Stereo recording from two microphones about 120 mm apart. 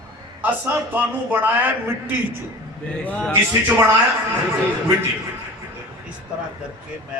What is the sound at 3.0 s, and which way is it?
Speech, 10° left (ahead or behind).